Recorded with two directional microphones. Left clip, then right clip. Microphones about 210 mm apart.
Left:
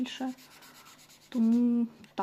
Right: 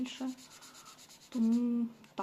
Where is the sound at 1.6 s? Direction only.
40° left (ahead or behind).